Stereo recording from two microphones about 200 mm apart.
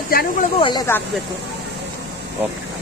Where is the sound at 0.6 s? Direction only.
20° left (ahead or behind).